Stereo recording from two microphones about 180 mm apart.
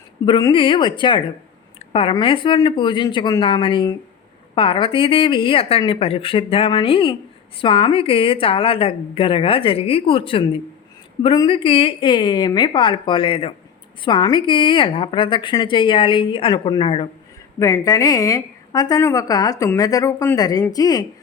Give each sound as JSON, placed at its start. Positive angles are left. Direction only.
{"t": 0.3, "sound": "a woman's voice", "side_deg": 25}
{"t": 17.6, "sound": "a woman's voice", "side_deg": 15}